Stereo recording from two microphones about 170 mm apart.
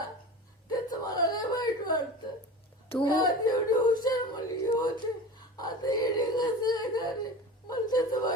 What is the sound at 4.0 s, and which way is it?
Female singing, 25° left (ahead or behind).